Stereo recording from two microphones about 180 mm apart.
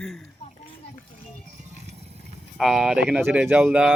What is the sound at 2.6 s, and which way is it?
Speech, centre (ahead or behind).